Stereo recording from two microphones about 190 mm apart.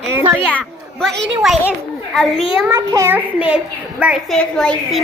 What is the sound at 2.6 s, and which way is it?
A child's voice, 15° right (ahead or behind).